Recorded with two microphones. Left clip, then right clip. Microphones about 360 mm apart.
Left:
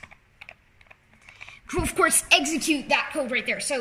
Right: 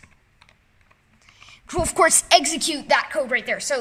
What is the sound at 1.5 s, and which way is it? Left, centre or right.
A woman's voice, centre.